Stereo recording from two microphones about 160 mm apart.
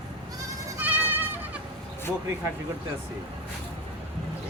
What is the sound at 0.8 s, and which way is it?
Goat, 10° right (ahead or behind).